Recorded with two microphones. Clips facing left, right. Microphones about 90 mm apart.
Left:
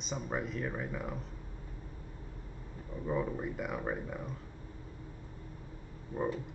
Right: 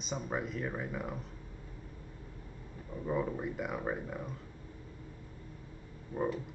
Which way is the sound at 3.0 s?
Centre (ahead or behind).